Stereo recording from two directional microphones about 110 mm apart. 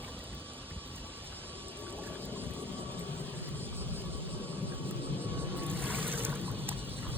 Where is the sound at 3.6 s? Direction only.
20° right (ahead or behind).